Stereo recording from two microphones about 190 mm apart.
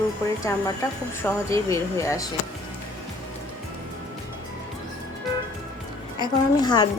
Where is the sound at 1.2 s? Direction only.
15° left (ahead or behind).